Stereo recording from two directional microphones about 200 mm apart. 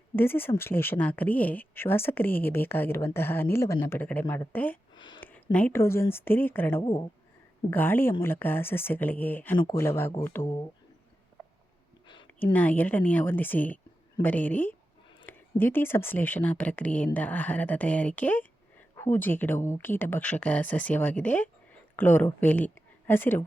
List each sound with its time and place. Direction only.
0.2 s speech: 10° left (ahead or behind)
4.9 s a sound: 25° left (ahead or behind)
5.2 s speech: 5° left (ahead or behind)
6.8 s speech: 20° left (ahead or behind)
7.7 s speech: 10° left (ahead or behind)
12.5 s speech: 10° left (ahead or behind)